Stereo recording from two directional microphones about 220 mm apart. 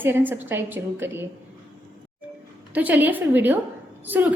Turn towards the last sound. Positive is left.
turn(degrees=-10)  # may be behind; listen again after turning